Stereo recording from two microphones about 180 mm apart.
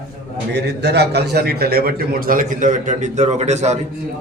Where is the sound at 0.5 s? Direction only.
70° right (ahead or behind); by 3.7 s 40° right (ahead or behind).